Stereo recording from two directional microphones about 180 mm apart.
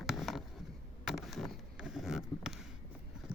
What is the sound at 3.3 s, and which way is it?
Clip-clop, 5° right (ahead or behind).